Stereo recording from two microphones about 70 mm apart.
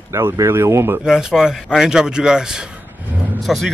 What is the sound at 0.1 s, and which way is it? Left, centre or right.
Speech, right.